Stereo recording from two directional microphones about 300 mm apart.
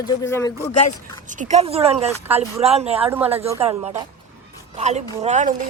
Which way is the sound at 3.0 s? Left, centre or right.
Centre.